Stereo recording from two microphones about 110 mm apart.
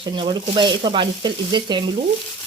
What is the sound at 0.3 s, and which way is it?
Speech, 45° right (ahead or behind).